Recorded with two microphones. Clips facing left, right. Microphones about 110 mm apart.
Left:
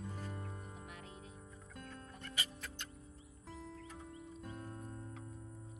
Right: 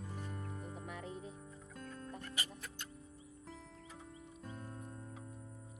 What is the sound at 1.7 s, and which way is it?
Music, centre (ahead or behind).